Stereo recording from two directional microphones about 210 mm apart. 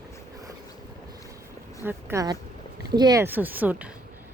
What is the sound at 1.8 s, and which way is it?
Speech, 10° right (ahead or behind).